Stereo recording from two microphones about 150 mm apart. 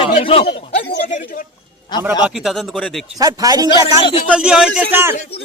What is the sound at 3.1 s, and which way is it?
Speech, 25° right (ahead or behind).